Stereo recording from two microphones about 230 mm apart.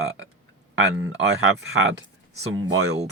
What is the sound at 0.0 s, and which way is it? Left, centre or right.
Speech, right.